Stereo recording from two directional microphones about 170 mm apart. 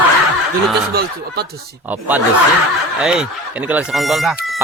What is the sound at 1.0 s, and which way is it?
Speech, 65° right (ahead or behind).